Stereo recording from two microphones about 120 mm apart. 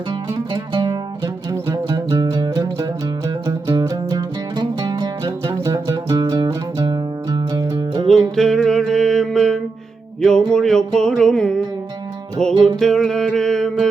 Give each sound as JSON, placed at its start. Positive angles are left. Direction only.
{"t": 0.3, "sound": "music", "side_deg": -35}
{"t": 8.0, "sound": "music", "side_deg": 5}